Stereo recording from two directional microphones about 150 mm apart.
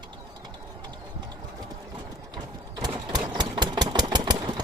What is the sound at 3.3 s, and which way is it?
Engine, 30° right (ahead or behind).